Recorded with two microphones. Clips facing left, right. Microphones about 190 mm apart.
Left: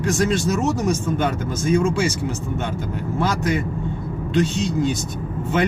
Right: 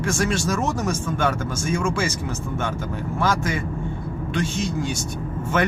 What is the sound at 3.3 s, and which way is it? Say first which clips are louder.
A man's voice: left 2 dB; 15° left (ahead or behind).